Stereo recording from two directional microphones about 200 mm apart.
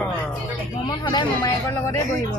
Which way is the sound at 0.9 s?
20° left (ahead or behind).